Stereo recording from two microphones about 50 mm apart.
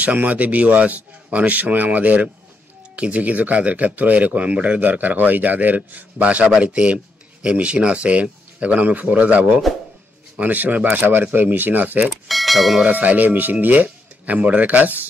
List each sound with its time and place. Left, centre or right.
0.0 s speech: right
6.4 s speech: centre; by 12.1 s right
12.3 s speech: centre
12.8 s speech: right